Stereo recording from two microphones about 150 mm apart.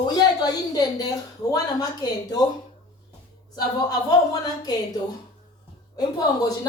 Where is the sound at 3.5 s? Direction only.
25° left (ahead or behind).